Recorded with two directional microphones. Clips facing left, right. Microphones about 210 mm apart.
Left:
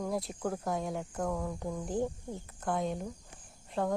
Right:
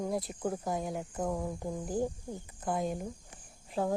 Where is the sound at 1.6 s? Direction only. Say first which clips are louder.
Even; 5° right (ahead or behind).